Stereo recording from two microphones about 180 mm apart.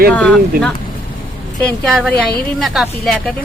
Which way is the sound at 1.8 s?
Centre (ahead or behind).